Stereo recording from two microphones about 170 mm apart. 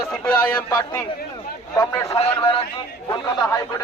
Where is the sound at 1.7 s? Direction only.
20° left (ahead or behind).